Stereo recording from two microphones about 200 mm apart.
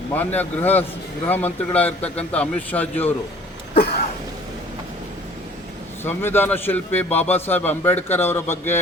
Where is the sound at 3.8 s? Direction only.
50° left (ahead or behind).